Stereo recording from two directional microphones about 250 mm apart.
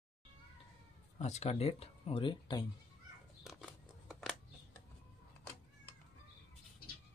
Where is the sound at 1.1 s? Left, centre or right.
Left.